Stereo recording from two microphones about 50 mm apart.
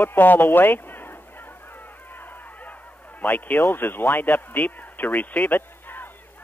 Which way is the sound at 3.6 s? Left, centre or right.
Left.